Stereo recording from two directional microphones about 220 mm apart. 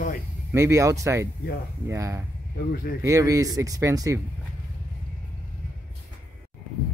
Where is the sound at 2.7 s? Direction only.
45° left (ahead or behind).